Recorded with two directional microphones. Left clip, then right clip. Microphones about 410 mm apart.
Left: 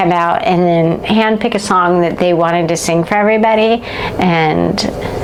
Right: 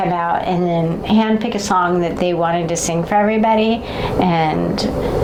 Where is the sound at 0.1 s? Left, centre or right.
Left.